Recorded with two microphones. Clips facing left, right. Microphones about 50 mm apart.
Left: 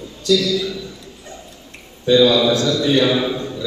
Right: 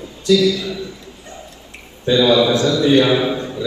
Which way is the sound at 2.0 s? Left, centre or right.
Right.